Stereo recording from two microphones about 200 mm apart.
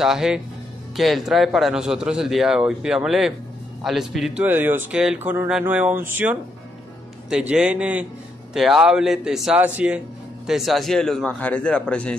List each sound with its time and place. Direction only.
0.0 s a man's voice: centre (ahead or behind)